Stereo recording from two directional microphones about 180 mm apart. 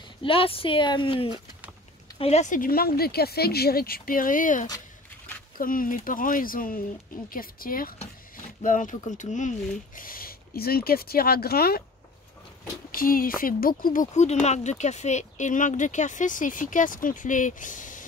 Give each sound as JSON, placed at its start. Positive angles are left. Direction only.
{"t": 0.2, "sound": "speech", "side_deg": 30}
{"t": 12.9, "sound": "speech", "side_deg": 50}